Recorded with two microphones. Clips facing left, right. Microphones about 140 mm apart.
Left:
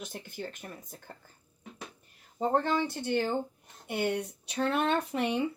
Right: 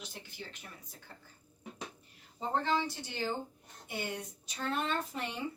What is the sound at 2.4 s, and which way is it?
Speech, 50° left (ahead or behind).